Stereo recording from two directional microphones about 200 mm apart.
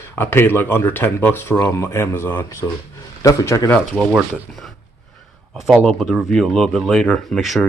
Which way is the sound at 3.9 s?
5° right (ahead or behind).